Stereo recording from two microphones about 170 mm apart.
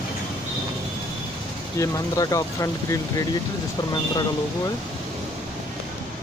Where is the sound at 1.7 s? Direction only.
20° left (ahead or behind).